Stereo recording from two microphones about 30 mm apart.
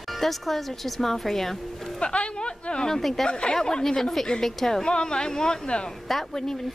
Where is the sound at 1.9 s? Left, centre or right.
Left.